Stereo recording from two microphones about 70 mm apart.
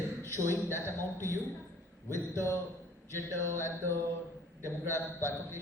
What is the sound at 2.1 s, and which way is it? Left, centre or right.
A man's voice, left.